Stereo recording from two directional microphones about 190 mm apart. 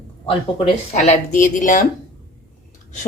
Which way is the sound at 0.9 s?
40° left (ahead or behind).